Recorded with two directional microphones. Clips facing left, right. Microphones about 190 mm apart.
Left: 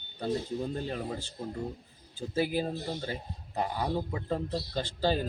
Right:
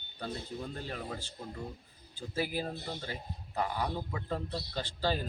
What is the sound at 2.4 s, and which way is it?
A man's voice, 25° left (ahead or behind).